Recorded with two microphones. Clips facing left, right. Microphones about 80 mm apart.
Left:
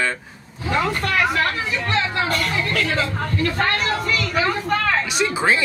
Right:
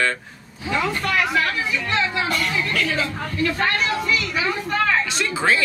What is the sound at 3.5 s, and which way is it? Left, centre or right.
Vehicle, left.